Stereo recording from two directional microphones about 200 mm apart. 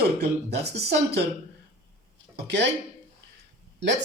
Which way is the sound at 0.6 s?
55° right (ahead or behind).